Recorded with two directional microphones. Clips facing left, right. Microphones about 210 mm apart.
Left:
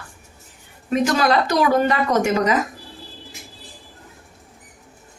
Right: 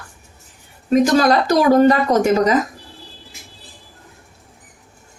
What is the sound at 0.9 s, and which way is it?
A woman's voice, 40° right (ahead or behind).